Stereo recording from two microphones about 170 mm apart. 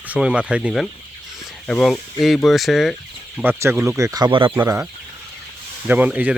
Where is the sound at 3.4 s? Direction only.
15° right (ahead or behind).